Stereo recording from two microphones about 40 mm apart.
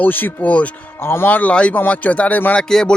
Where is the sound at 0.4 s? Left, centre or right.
Left.